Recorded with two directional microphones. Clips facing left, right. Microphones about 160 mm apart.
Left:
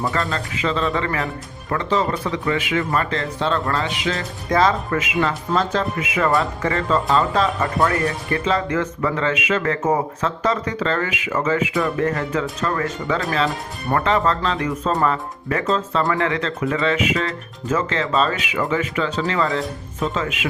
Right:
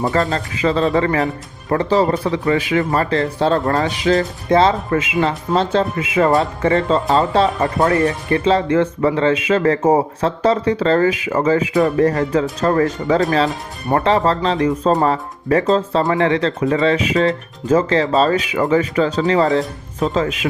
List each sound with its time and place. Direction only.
0.1 s speech: 40° right (ahead or behind)